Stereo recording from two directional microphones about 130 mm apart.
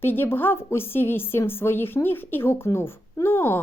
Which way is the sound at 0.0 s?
15° left (ahead or behind).